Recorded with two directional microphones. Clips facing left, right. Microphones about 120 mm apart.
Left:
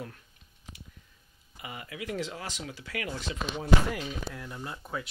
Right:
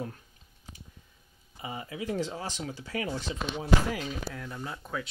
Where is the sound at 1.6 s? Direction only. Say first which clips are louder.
Right 3 dB; 25° right (ahead or behind).